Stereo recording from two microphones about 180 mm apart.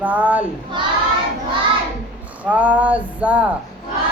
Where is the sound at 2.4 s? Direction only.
10° right (ahead or behind).